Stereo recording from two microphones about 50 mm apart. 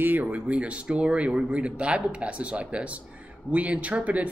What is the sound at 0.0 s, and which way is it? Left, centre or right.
Speech, right.